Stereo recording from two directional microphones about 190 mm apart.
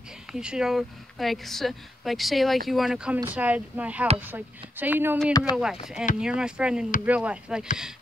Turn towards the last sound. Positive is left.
turn(degrees=-5)  # may be behind; listen again after turning